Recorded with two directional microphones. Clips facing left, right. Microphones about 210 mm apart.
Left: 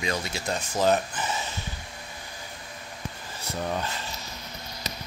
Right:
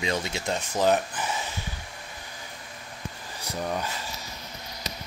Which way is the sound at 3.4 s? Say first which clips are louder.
Even; 10° right (ahead or behind).